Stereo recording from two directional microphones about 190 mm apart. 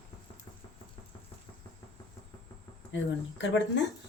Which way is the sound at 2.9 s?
70° left (ahead or behind).